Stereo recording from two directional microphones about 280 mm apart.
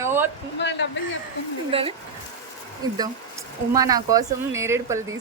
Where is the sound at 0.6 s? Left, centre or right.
Left.